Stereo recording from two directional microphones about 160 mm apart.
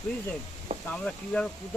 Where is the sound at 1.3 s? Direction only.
10° left (ahead or behind).